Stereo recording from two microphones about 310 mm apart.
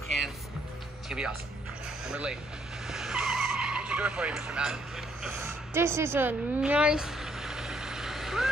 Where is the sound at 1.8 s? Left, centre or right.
Centre.